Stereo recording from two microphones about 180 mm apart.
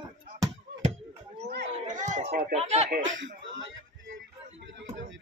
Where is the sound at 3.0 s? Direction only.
90° right.